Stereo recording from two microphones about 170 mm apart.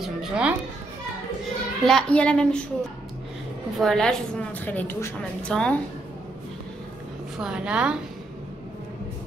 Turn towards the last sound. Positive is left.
turn(degrees=-5)  # may be behind; listen again after turning